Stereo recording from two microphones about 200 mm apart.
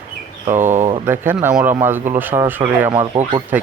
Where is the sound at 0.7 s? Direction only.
30° right (ahead or behind).